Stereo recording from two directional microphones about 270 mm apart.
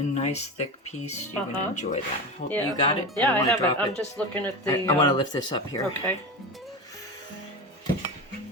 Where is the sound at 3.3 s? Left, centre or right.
Centre.